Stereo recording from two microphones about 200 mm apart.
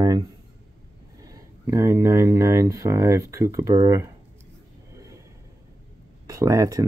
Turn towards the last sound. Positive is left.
turn(degrees=-15)  # may be behind; listen again after turning